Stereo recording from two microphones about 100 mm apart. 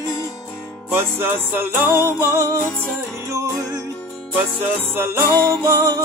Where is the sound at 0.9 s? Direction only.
25° right (ahead or behind).